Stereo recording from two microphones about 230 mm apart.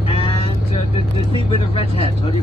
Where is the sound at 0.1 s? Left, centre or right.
Left.